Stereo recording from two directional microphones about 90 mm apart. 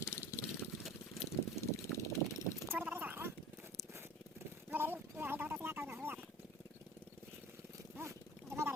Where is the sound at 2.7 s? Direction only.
25° right (ahead or behind).